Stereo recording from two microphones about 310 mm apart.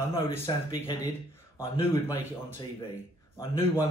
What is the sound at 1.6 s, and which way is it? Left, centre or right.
A man's voice, centre.